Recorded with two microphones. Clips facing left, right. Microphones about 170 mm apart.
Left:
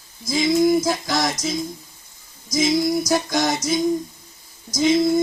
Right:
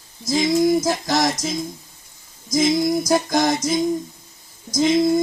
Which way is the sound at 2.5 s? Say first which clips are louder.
Right 1 dB; 50° right (ahead or behind).